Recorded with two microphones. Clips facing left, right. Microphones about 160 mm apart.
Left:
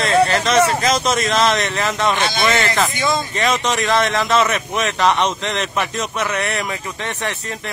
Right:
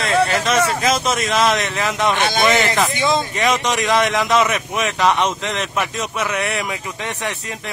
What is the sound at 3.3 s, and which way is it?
Speech, 10° right (ahead or behind).